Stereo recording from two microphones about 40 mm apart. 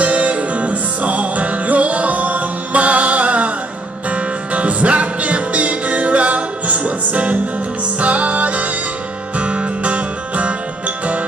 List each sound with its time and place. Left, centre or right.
0.0 s music: right